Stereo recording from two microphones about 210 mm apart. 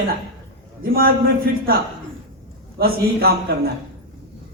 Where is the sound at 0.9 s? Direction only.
45° right (ahead or behind).